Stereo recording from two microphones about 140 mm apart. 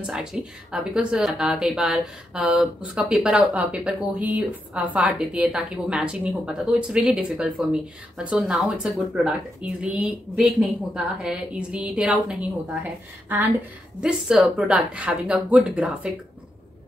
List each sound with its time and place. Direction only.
0.0 s a woman's voice: 5° right (ahead or behind)
14.0 s a woman's voice: 5° right (ahead or behind)